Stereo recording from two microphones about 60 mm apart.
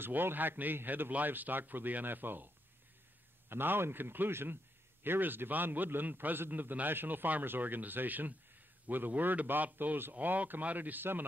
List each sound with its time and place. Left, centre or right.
0.0 s a man's voice: right